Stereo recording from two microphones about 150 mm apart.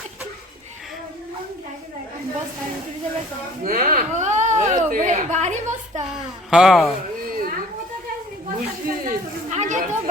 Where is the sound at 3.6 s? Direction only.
70° right (ahead or behind); by 6.0 s 50° right (ahead or behind).